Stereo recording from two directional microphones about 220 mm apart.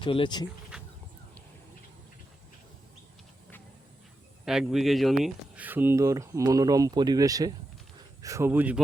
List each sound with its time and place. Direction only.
0.0 s speech: 20° left (ahead or behind)
4.4 s speech: centre (ahead or behind)